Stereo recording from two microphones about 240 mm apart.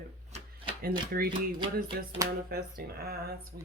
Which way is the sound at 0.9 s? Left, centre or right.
Right.